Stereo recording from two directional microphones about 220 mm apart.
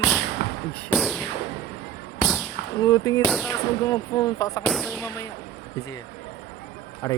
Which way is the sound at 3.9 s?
15° left (ahead or behind).